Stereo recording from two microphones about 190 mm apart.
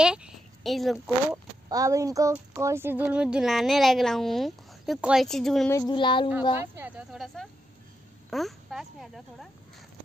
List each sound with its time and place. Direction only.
0.0 s speech: 5° right (ahead or behind)
1.7 s speech: 15° right (ahead or behind); by 5.7 s centre (ahead or behind)
5.7 s speech: 20° left (ahead or behind)
6.5 s speech: 10° right (ahead or behind)